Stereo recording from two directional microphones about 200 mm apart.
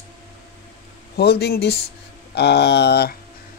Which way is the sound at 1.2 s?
55° left (ahead or behind).